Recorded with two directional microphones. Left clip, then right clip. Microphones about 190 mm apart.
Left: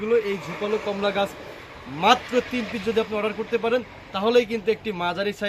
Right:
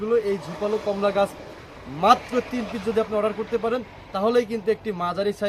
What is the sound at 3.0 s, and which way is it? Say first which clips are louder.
A man's voice: right 3 dB; 10° right (ahead or behind).